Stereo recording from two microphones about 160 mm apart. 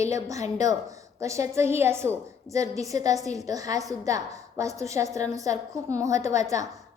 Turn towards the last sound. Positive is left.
turn(degrees=-20)  # may be behind; listen again after turning